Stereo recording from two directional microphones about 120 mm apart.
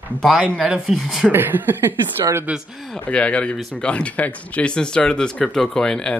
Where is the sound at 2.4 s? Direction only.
5° right (ahead or behind).